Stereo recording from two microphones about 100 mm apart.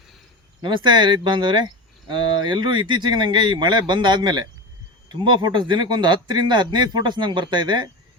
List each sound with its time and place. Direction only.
0.6 s speech: 50° right (ahead or behind)